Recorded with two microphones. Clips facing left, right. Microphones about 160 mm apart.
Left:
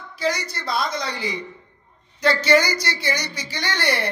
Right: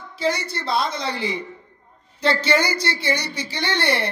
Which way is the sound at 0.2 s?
30° right (ahead or behind).